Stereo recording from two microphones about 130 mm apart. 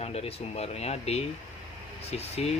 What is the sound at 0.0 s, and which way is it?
Speech, 50° left (ahead or behind).